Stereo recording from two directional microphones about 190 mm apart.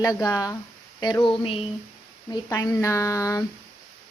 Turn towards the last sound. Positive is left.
turn(degrees=15)  # may be behind; listen again after turning